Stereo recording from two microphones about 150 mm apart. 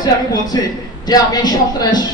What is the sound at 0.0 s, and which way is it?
A man's voice, 25° left (ahead or behind).